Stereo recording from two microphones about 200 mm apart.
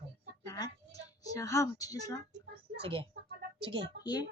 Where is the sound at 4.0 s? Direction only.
20° left (ahead or behind).